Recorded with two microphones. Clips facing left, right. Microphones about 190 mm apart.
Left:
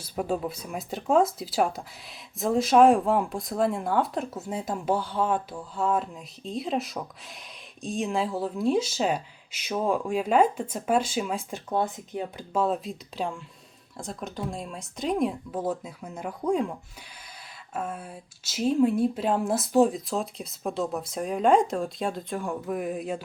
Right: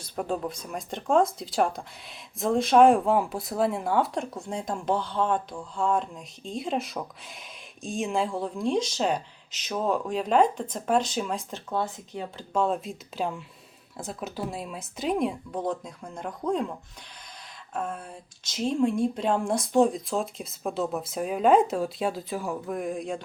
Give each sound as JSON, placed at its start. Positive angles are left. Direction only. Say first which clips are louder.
{"t": 0.0, "sound": "speech", "louder": "left 1 dB", "side_deg": 5}
{"t": 12.5, "sound": "speech", "louder": "even", "side_deg": 0}
{"t": 17.7, "sound": "speech", "louder": "even", "side_deg": 5}